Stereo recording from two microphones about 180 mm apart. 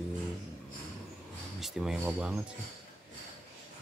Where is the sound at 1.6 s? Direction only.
5° right (ahead or behind).